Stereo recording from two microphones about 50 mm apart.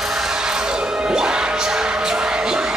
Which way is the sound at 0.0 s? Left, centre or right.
Centre.